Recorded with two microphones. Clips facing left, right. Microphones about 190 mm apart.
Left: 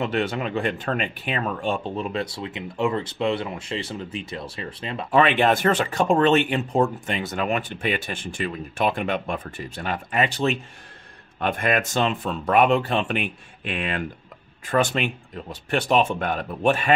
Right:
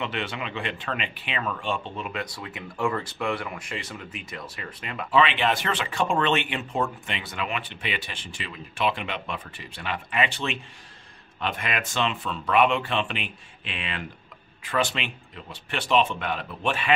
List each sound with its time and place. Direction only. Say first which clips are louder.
0.0 s speech: left 7 dB; 40° left (ahead or behind)
5.1 s speech: left 4 dB; 50° left (ahead or behind)